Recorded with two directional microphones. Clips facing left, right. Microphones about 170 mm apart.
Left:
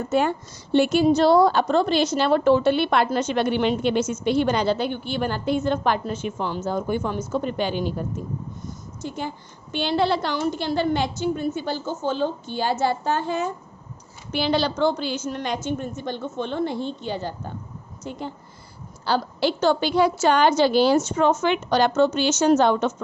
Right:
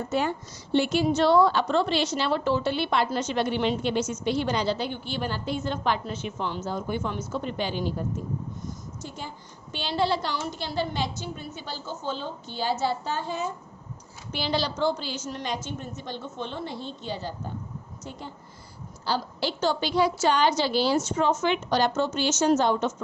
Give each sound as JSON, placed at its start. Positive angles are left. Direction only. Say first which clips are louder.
{"t": 0.1, "sound": "a woman's voice", "louder": "left 7 dB", "side_deg": 55}
{"t": 1.0, "sound": "a woman's voice", "louder": "left 3 dB", "side_deg": 35}
{"t": 9.0, "sound": "a woman's voice", "louder": "left 7 dB", "side_deg": 60}
{"t": 19.0, "sound": "a woman's voice", "louder": "left 6 dB", "side_deg": 60}